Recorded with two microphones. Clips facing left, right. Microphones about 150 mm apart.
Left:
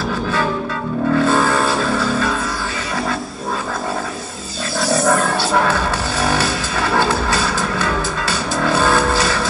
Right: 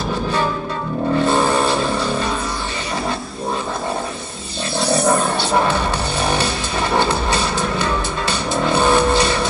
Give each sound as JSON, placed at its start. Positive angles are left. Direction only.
{"t": 1.1, "sound": "music", "side_deg": -20}
{"t": 5.5, "sound": "music", "side_deg": -20}